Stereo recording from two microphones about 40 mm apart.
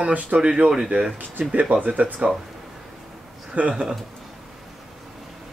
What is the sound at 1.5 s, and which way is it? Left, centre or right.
Speech, right.